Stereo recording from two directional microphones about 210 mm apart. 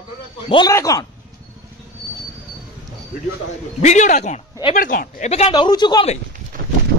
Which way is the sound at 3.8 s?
35° left (ahead or behind).